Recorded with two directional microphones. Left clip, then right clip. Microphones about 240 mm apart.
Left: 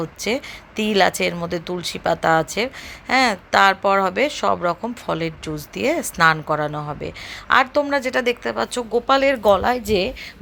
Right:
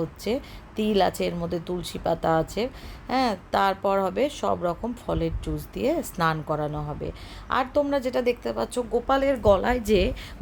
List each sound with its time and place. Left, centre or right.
0.2 s speech: centre
9.0 s speech: centre
9.4 s a woman's voice: centre